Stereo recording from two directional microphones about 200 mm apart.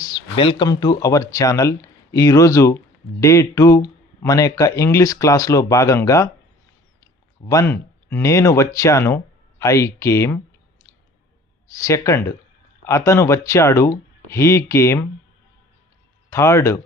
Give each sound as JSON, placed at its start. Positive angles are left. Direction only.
{"t": 0.0, "sound": "speech", "side_deg": 20}
{"t": 11.8, "sound": "speech", "side_deg": 15}
{"t": 16.3, "sound": "speech", "side_deg": 15}